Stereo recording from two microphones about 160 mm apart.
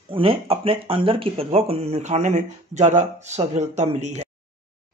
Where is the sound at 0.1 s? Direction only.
35° right (ahead or behind).